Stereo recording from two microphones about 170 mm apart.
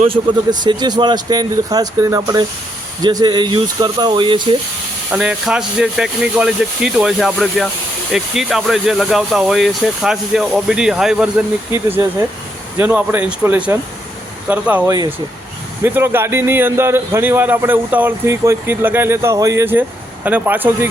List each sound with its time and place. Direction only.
0.0 s speech: 30° right (ahead or behind)
5.1 s a man's voice: 5° right (ahead or behind)